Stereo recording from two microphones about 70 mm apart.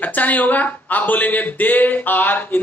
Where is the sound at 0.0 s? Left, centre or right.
Left.